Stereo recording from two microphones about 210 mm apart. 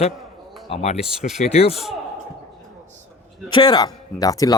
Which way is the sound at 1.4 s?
30° left (ahead or behind).